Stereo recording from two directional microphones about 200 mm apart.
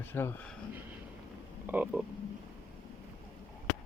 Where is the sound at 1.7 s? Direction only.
10° right (ahead or behind).